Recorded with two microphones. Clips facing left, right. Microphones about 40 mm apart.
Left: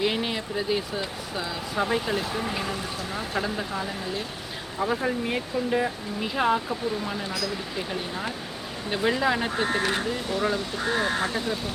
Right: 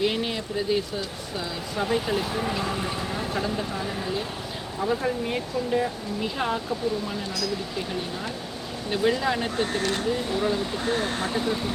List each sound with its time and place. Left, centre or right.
0.0 s speech: centre
10.1 s speech: centre